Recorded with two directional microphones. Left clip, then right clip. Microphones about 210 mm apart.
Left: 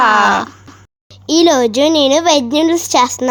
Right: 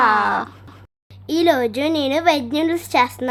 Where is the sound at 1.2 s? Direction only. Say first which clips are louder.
Left 6 dB; 20° left (ahead or behind).